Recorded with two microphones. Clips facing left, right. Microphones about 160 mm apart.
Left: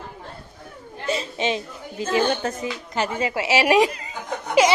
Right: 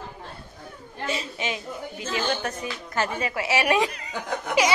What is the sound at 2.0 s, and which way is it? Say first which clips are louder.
Speech: left 6 dB; 60° left (ahead or behind).